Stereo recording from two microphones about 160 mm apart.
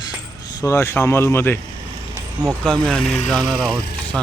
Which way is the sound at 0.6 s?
15° left (ahead or behind).